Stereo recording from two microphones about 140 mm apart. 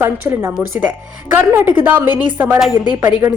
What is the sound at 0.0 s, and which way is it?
Speech, 15° right (ahead or behind).